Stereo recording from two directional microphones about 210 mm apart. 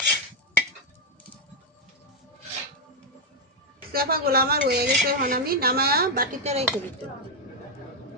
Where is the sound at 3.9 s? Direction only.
45° right (ahead or behind).